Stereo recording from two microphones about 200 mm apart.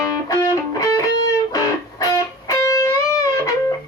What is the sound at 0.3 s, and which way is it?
Music, 15° left (ahead or behind).